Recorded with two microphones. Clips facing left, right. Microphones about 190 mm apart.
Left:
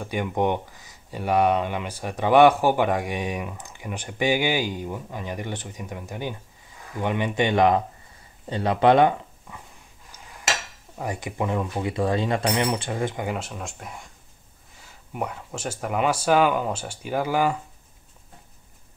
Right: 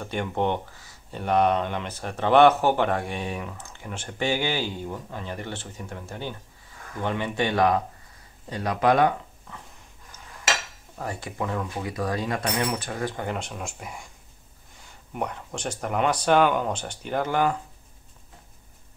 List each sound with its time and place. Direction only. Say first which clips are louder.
0.0 s speech: left 2 dB; 10° left (ahead or behind); by 9.1 s 25° left (ahead or behind)
9.5 s dog: even; 10° left (ahead or behind)
11.0 s speech: left 3 dB; 15° left (ahead or behind)
13.1 s speech: left 1 dB; 10° left (ahead or behind)